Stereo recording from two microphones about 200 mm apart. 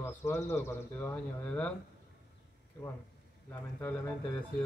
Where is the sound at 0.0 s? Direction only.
10° left (ahead or behind).